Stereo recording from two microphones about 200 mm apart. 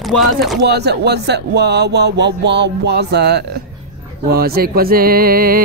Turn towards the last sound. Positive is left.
turn(degrees=-45)  # may be behind; listen again after turning